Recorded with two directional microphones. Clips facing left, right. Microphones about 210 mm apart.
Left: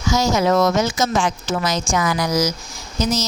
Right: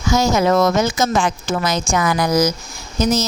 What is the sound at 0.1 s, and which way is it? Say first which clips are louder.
Speech: right 2 dB; 55° right (ahead or behind).